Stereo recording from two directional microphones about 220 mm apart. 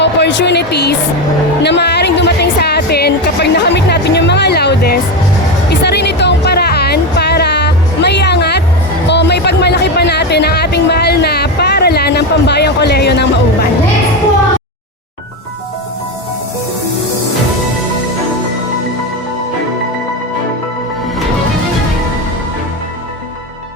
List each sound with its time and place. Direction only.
0.0 s speech: 55° left (ahead or behind)
5.8 s music: 50° left (ahead or behind)